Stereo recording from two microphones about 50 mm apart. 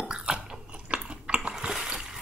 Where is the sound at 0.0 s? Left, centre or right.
Centre.